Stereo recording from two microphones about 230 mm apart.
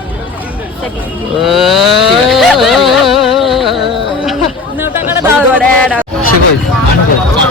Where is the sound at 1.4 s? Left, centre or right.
Centre.